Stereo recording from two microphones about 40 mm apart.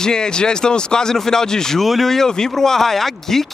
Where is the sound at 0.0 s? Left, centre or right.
Centre.